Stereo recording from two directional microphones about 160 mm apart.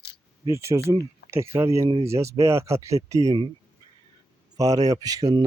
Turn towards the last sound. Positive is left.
turn(degrees=-25)  # may be behind; listen again after turning